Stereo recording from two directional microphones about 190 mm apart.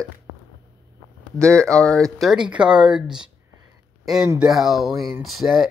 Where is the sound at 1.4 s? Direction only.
5° left (ahead or behind).